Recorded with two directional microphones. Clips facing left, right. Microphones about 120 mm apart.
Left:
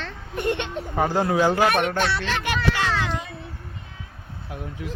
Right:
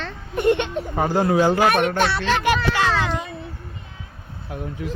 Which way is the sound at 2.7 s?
90° right.